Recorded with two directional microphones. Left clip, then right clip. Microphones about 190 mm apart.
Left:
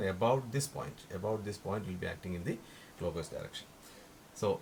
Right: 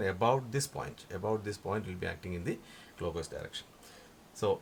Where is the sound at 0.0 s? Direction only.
45° right (ahead or behind).